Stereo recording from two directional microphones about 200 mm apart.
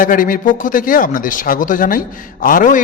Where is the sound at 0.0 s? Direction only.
45° left (ahead or behind).